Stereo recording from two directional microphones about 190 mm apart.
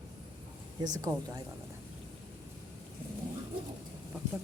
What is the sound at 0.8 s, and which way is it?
Speech, 20° right (ahead or behind).